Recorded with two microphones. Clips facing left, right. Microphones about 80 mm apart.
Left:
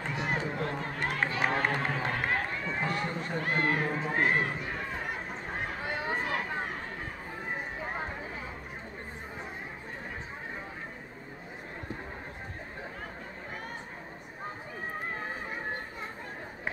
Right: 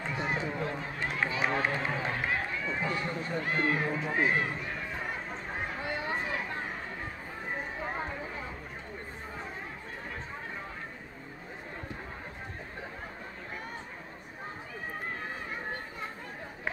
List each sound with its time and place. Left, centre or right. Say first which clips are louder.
0.0 s run: even; left